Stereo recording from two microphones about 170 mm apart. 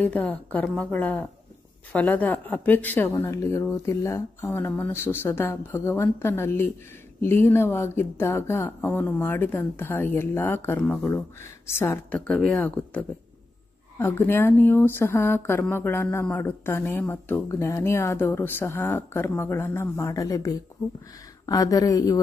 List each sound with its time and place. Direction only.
0.0 s speech: 10° left (ahead or behind)